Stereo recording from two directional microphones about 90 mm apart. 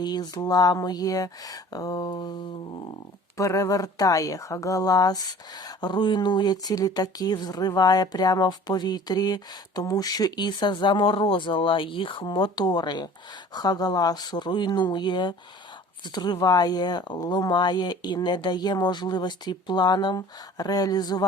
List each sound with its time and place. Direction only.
0.0 s speech: 50° left (ahead or behind)
3.3 s speech: 35° left (ahead or behind)